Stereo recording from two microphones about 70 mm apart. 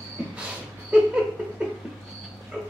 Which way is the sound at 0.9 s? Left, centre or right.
Centre.